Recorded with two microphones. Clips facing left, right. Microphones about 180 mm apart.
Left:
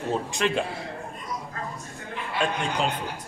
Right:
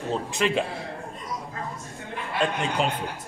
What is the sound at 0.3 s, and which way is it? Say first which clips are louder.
Speech: right 4 dB; centre (ahead or behind).